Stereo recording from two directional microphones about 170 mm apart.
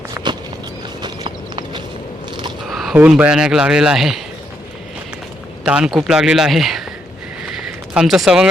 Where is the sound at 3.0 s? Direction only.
5° right (ahead or behind).